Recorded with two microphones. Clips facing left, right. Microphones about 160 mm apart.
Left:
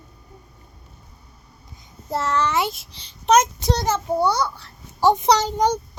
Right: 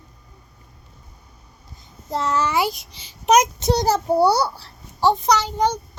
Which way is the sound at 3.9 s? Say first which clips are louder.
Right 4 dB; 35° right (ahead or behind).